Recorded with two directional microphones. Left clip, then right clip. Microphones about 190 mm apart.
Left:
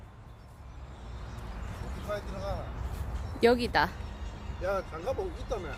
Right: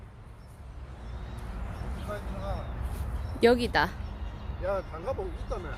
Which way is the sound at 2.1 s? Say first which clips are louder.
Left 2 dB; 45° left (ahead or behind).